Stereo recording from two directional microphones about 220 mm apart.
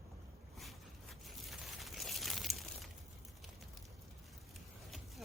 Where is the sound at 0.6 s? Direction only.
Centre (ahead or behind).